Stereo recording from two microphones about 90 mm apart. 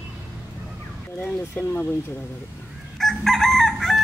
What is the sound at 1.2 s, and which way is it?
Speech, 15° left (ahead or behind).